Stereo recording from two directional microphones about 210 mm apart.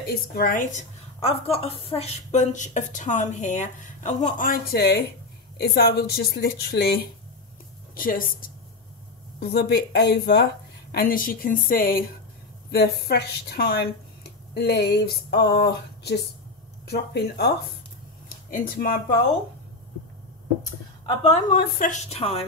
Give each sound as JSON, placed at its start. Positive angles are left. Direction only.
{"t": 0.1, "sound": "a woman's voice", "side_deg": 45}
{"t": 21.2, "sound": "a woman's voice", "side_deg": 35}